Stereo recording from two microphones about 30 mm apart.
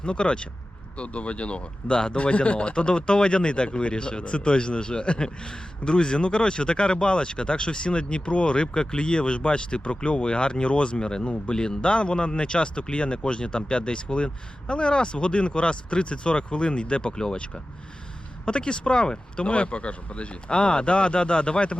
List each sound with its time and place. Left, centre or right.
0.0 s speech: left
19.5 s speech: left